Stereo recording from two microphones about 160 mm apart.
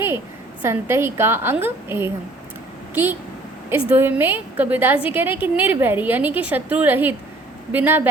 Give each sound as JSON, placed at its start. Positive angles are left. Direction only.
{"t": 0.6, "sound": "a woman's voice", "side_deg": -15}